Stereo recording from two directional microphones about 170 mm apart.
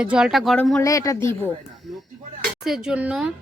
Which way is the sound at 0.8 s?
20° left (ahead or behind).